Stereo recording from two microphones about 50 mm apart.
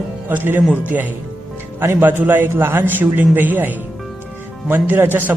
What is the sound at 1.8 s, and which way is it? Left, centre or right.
Speech, right.